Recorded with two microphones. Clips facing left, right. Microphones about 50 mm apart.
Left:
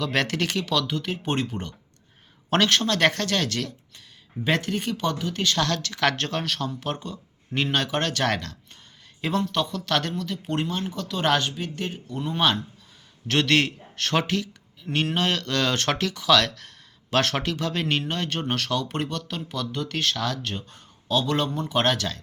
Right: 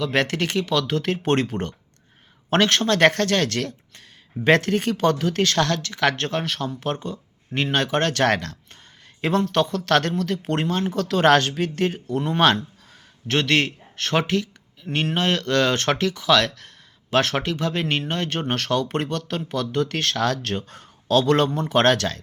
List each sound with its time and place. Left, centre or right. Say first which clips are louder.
0.0 s speech: right 3 dB; right
0.9 s speech: right 6 dB; right
2.5 s speech: right 3 dB; right
5.5 s speech: right 3 dB; right
13.2 s speech: right 1 dB; right